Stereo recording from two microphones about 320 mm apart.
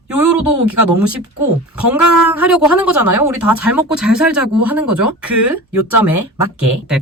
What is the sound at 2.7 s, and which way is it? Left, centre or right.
Speech, right.